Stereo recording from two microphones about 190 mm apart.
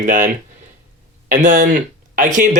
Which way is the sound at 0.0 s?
40° right (ahead or behind).